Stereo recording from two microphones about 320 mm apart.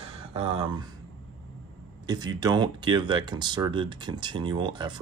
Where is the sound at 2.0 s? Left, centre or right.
Centre.